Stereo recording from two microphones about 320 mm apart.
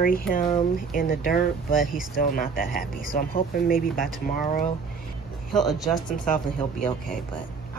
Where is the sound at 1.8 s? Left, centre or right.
Centre.